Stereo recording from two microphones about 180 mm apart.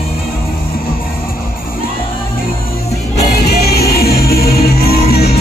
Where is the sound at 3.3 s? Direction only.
60° left (ahead or behind).